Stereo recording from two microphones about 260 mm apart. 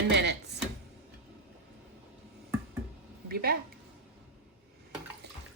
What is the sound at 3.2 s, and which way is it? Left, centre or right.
Speech, right.